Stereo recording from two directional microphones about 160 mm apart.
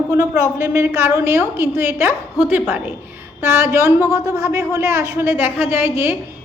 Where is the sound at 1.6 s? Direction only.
15° right (ahead or behind).